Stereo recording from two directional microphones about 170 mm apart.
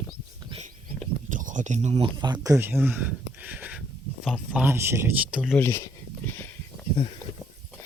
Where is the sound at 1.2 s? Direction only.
50° right (ahead or behind).